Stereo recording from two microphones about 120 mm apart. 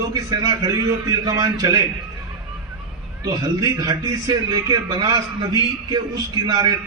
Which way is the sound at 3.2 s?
30° right (ahead or behind).